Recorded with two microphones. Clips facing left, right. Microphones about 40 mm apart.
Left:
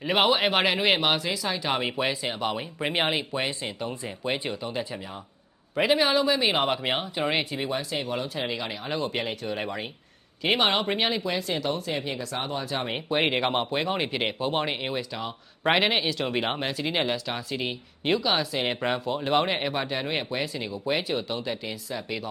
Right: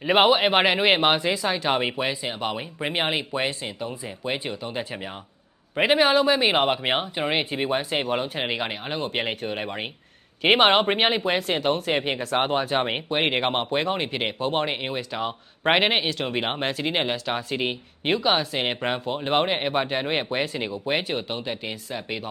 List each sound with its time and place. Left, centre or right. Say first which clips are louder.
0.0 s speech: right 4 dB; centre
2.0 s speech: even; centre
5.7 s speech: right 3 dB; right
7.5 s speech: right 4 dB; right
13.1 s speech: right 1 dB; centre
16.0 s speech: right 1 dB; centre; by 22.3 s right